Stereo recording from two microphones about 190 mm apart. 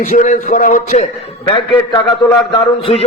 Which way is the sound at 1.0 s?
25° left (ahead or behind).